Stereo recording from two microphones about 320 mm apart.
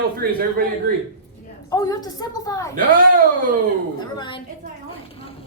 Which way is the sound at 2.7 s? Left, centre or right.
Right.